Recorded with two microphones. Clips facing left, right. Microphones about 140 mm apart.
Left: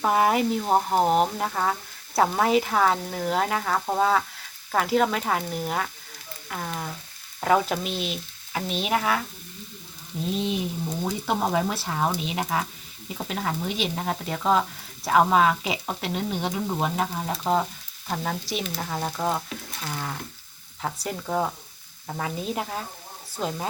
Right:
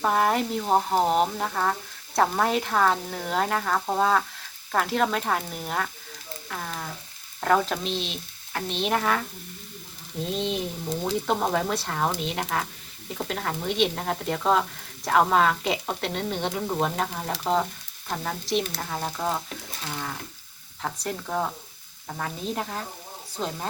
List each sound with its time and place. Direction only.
0.0 s speech: 5° left (ahead or behind)
10.3 s frying: 5° left (ahead or behind)
11.0 s speech: 5° left (ahead or behind)